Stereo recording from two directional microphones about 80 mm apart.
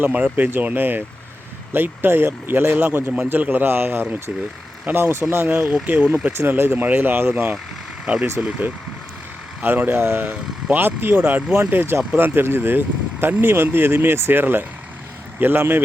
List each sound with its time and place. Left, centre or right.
0.0 s speech: centre
8.0 s speech: centre
11.7 s speech: right